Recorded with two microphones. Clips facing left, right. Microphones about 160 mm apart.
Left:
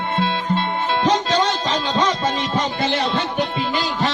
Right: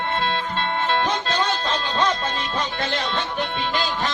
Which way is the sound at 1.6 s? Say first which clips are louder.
Left 3 dB; 10° left (ahead or behind).